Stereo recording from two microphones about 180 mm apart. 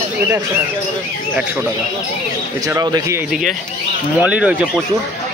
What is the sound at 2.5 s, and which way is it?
Speech, 20° right (ahead or behind).